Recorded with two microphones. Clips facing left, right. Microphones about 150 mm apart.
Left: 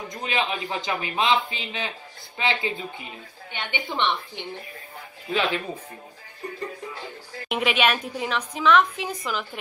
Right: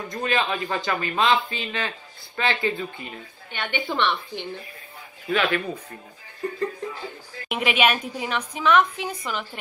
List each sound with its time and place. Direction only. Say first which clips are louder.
0.1 s a woman's voice: right 3 dB; 15° left (ahead or behind)
7.4 s a woman's voice: right 1 dB; centre (ahead or behind)